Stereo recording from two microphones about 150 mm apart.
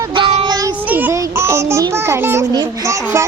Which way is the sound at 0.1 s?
35° right (ahead or behind).